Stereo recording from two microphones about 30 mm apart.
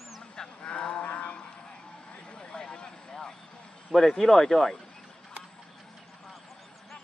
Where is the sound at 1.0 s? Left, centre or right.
Left.